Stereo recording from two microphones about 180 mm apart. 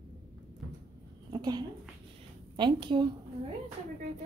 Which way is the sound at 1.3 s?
25° right (ahead or behind).